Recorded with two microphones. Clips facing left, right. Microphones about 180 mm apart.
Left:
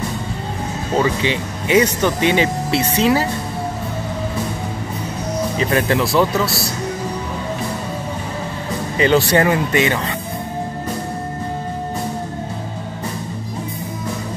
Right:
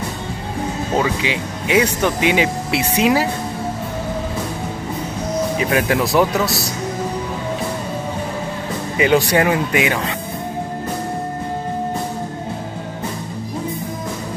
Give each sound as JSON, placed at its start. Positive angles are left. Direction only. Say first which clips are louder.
{"t": 0.9, "sound": "speech", "louder": "left 3 dB", "side_deg": -5}
{"t": 5.6, "sound": "speech", "louder": "left 2 dB", "side_deg": -10}
{"t": 8.9, "sound": "speech", "louder": "even", "side_deg": -10}